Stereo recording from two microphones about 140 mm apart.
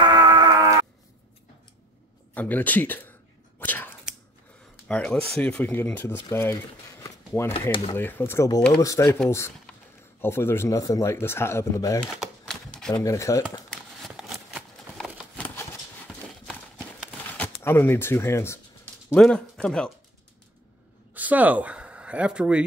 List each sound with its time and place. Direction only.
0.0 s wail: 30° right (ahead or behind)
2.3 s a sound: 10° left (ahead or behind)
4.8 s speech: 5° left (ahead or behind); by 9.2 s 20° left (ahead or behind)
10.2 s speech: 15° left (ahead or behind)
12.0 s typewriter: 5° left (ahead or behind)
12.9 s speech: 20° left (ahead or behind)
13.7 s a sound: centre (ahead or behind)
16.1 s clip-clop: 5° left (ahead or behind)
17.3 s speech: 15° left (ahead or behind)
19.1 s speech: 5° left (ahead or behind)
21.1 s speech: 10° right (ahead or behind)